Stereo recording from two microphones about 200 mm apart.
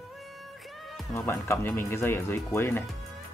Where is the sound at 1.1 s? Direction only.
10° left (ahead or behind).